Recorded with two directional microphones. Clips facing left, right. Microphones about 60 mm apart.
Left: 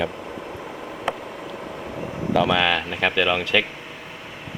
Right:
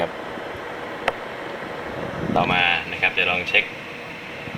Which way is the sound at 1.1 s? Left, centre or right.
Right.